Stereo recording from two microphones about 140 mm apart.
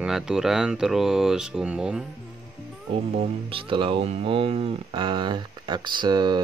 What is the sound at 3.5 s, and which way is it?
Speech, 40° right (ahead or behind).